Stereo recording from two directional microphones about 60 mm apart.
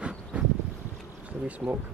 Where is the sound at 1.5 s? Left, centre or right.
Right.